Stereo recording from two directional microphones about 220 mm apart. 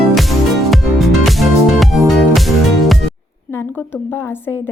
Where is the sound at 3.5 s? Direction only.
10° left (ahead or behind).